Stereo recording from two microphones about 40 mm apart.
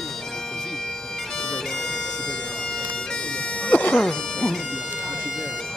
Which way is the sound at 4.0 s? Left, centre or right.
Centre.